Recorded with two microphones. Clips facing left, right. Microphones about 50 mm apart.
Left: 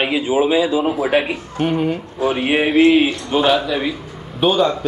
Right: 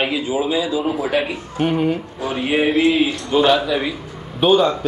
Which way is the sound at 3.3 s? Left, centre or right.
Centre.